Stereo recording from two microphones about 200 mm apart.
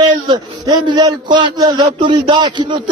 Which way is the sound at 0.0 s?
20° right (ahead or behind).